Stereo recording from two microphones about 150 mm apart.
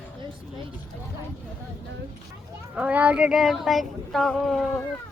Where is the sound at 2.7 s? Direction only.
10° right (ahead or behind).